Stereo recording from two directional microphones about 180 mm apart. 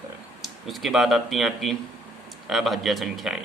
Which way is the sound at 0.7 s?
Centre (ahead or behind).